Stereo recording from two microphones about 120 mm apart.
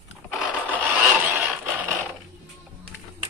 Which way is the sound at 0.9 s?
20° right (ahead or behind).